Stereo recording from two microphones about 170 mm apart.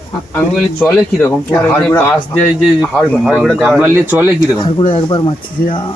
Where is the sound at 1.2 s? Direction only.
10° left (ahead or behind); by 4.5 s 10° right (ahead or behind).